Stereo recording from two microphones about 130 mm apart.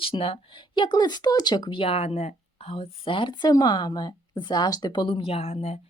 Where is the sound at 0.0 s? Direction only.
45° left (ahead or behind).